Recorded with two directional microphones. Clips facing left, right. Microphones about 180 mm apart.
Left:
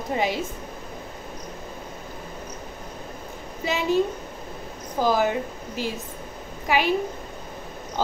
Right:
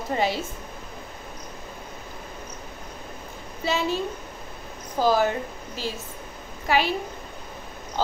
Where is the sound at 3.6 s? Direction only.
15° left (ahead or behind).